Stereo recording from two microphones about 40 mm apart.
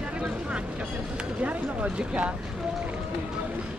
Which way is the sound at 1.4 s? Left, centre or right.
Right.